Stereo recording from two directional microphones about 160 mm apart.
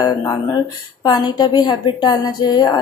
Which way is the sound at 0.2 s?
25° left (ahead or behind).